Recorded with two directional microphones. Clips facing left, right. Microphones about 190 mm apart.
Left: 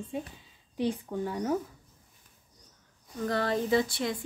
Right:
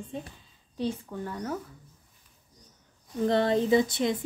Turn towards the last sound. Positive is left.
turn(degrees=-20)  # may be behind; listen again after turning